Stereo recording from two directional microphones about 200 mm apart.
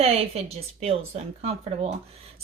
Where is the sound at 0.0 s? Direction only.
30° right (ahead or behind).